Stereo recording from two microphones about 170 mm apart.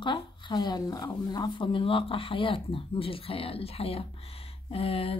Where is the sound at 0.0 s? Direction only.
25° left (ahead or behind).